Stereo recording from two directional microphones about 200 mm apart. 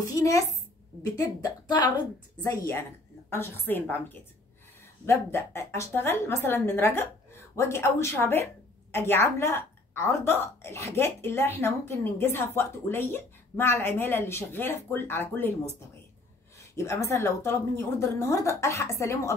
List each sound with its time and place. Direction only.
0.2 s a woman's voice: 15° left (ahead or behind)
16.5 s a woman's voice: 15° left (ahead or behind)